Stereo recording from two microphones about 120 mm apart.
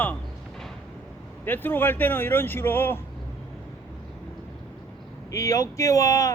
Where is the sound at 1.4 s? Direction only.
15° left (ahead or behind).